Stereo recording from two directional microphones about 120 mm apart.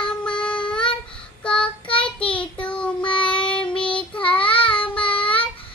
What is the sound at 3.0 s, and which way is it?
Child singing, 45° left (ahead or behind).